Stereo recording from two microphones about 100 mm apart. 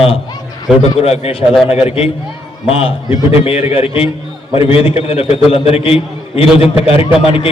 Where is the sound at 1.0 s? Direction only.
90° left; by 2.9 s 70° left (ahead or behind).